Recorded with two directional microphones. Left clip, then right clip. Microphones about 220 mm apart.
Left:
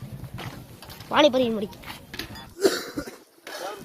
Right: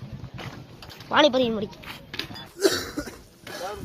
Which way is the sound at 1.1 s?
10° left (ahead or behind).